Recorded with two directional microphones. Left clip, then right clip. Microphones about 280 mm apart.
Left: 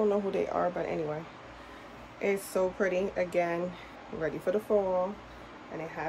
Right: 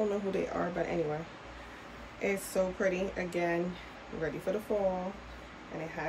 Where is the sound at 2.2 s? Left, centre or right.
Left.